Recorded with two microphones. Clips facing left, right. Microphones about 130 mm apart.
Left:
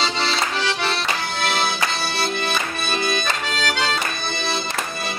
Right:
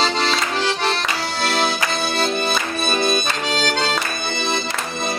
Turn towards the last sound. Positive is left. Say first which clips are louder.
# right 4 dB
turn(degrees=-45)  # may be behind; listen again after turning